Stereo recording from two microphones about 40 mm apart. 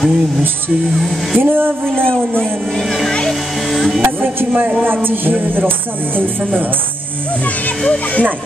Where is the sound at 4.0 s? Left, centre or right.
Right.